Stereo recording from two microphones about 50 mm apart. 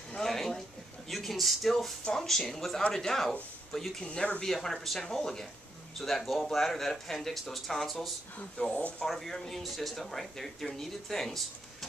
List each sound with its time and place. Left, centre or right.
0.2 s a sound: centre
2.1 s speech: centre
4.0 s speech: left
4.5 s speech: centre
8.5 s speech: left
9.0 s speech: centre